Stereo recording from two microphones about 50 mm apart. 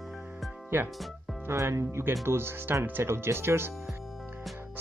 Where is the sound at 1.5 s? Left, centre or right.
Right.